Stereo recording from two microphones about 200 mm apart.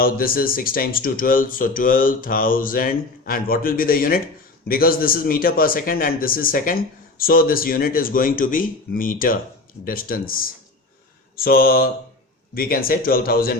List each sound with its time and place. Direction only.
0.0 s a man's voice: 45° left (ahead or behind)